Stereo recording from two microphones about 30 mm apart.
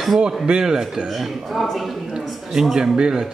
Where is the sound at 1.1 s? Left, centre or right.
Centre.